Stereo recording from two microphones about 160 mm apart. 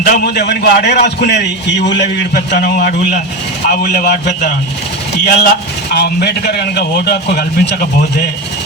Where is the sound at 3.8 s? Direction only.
80° left.